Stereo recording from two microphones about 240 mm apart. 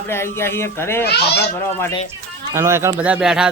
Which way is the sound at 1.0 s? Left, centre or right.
Left.